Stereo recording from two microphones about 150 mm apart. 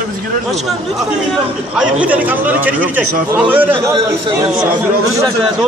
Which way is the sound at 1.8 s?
10° right (ahead or behind).